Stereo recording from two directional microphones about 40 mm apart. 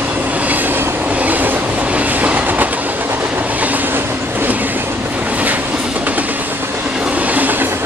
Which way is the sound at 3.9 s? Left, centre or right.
Right.